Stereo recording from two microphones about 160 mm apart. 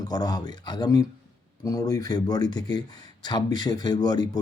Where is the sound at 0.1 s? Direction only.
25° left (ahead or behind).